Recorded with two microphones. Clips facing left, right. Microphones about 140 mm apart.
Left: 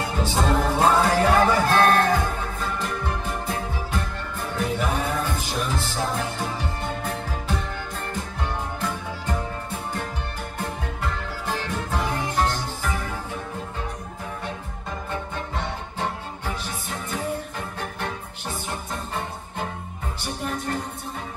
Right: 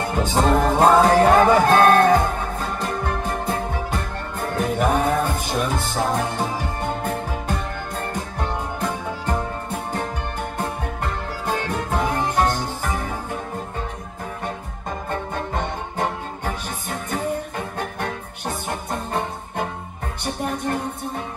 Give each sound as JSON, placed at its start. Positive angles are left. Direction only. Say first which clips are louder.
{"t": 0.0, "sound": "music", "louder": "right 4 dB", "side_deg": -55}
{"t": 10.6, "sound": "music", "louder": "right 2 dB", "side_deg": -55}
{"t": 15.0, "sound": "music", "louder": "right 5 dB", "side_deg": -50}